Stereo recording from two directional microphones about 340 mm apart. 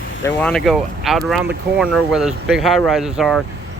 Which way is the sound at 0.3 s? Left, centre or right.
Centre.